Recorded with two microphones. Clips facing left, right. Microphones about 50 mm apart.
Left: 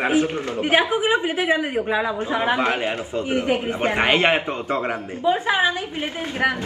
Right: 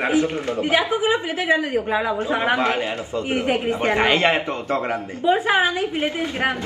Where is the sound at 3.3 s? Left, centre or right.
Right.